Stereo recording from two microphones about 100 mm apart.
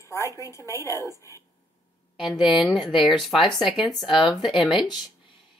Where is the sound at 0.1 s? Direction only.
30° left (ahead or behind).